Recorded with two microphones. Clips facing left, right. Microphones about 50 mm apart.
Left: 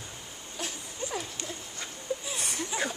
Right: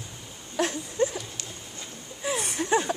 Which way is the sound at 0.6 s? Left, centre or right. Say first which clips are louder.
Right 12 dB; right.